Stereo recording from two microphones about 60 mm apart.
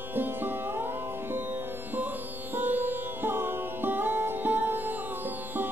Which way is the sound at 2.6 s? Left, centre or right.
Right.